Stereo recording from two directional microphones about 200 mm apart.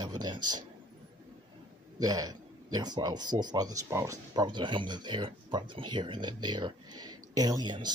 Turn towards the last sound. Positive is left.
turn(degrees=-20)  # may be behind; listen again after turning